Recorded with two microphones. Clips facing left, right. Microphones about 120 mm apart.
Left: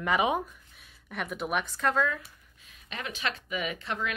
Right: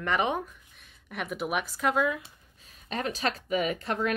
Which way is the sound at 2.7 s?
35° right (ahead or behind).